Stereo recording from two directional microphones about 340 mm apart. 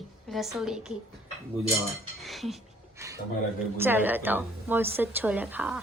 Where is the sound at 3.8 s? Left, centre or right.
Centre.